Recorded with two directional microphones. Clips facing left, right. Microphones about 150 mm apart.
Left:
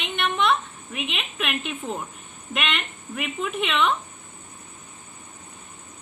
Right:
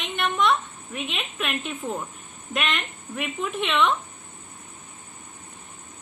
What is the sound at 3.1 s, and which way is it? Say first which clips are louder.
Speech: even; 5° left (ahead or behind).